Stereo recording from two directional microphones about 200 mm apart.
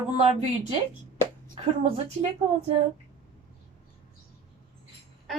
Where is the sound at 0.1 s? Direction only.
30° right (ahead or behind).